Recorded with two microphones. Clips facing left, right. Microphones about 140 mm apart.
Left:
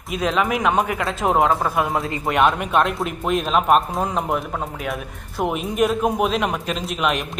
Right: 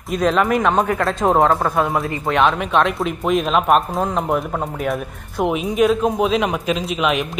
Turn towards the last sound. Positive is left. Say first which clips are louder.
# right 3 dB
turn(degrees=0)  # may be behind; listen again after turning